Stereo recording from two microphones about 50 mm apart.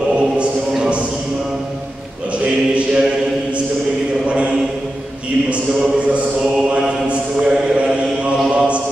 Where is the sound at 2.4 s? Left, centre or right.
Right.